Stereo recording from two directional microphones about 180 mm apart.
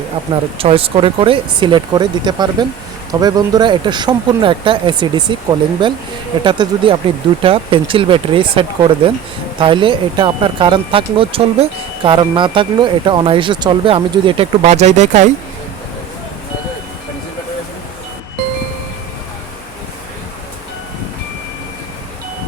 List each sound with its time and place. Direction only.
0.6 s speech: 30° right (ahead or behind)